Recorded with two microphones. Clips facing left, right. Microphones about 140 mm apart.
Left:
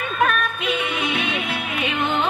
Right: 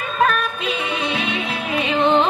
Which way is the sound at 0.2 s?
30° right (ahead or behind).